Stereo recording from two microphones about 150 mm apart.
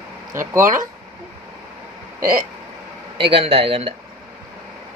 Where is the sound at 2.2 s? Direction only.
70° right (ahead or behind).